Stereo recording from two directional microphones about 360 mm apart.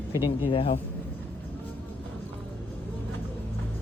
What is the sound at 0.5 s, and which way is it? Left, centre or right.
Speech, centre.